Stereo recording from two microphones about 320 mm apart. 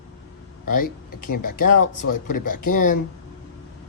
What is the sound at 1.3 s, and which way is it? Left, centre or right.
Speech, left.